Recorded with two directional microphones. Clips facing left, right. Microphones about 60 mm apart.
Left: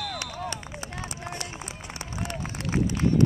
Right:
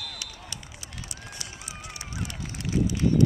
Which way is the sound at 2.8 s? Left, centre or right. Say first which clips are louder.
Even; left.